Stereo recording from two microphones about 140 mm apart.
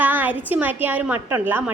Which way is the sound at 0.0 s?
10° right (ahead or behind).